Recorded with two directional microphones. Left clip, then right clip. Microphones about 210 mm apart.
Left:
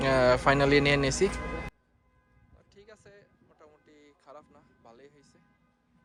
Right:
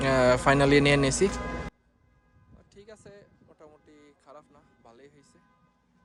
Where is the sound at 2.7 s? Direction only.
25° right (ahead or behind).